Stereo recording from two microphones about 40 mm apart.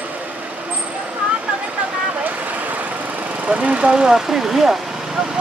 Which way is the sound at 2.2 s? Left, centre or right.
Right.